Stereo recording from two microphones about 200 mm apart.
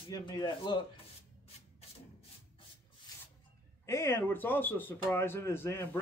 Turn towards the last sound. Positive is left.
turn(degrees=15)  # may be behind; listen again after turning